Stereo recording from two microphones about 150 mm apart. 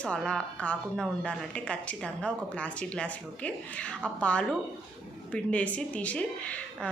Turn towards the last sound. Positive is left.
turn(degrees=10)  # may be behind; listen again after turning